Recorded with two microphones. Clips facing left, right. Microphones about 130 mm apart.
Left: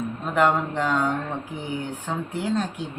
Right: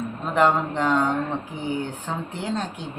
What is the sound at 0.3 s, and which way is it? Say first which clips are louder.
Speech: right 1 dB; centre (ahead or behind).